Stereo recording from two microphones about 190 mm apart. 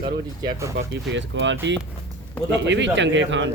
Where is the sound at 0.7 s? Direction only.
70° right (ahead or behind).